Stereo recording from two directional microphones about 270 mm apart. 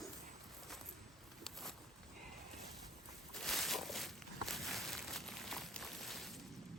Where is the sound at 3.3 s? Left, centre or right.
Centre.